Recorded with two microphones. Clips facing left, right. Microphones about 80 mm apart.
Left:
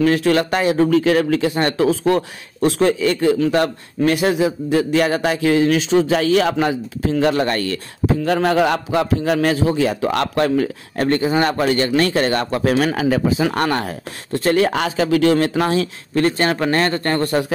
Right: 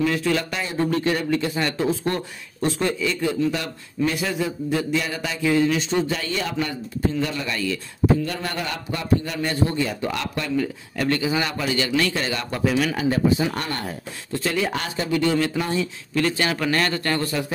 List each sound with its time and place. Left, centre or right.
0.0 s speech: left
0.7 s a man's voice: left
1.6 s speech: left
1.9 s a man's voice: left
8.3 s a man's voice: left
11.0 s speech: left
12.9 s speech: left
14.7 s a man's voice: left
15.3 s a man's voice: left
16.2 s a man's voice: left